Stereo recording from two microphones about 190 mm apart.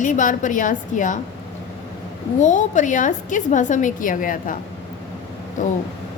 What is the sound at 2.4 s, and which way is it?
A woman's voice, 40° left (ahead or behind).